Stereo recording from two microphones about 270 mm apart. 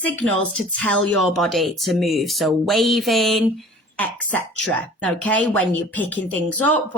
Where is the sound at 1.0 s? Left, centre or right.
Right.